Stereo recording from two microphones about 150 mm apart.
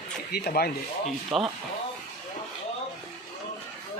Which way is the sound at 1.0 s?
Centre (ahead or behind).